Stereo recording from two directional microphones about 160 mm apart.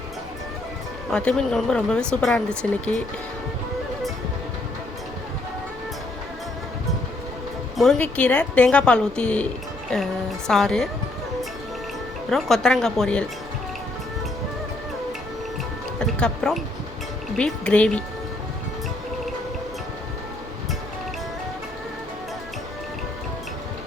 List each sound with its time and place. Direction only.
1.1 s speech: 5° left (ahead or behind)
7.8 s speech: 5° left (ahead or behind)
12.3 s speech: centre (ahead or behind)
16.0 s speech: 5° left (ahead or behind)